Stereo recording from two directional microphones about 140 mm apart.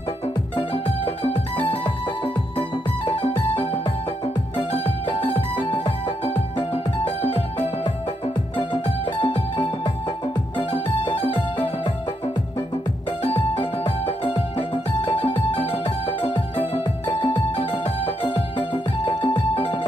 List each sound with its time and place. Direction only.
0.6 s music: 40° left (ahead or behind)
13.2 s music: 40° left (ahead or behind)